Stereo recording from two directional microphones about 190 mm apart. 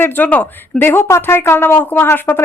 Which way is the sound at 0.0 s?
10° left (ahead or behind).